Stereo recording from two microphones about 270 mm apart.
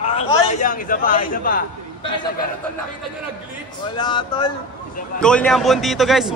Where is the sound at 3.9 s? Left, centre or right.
Centre.